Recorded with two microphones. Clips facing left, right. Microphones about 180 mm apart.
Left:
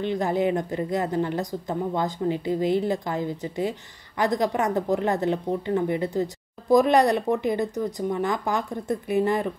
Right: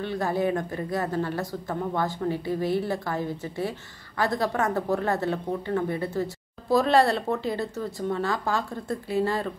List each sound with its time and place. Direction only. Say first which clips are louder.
0.0 s a woman's voice: left 2 dB; 20° left (ahead or behind)